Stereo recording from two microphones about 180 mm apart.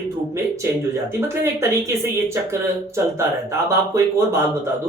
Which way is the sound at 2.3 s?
15° right (ahead or behind).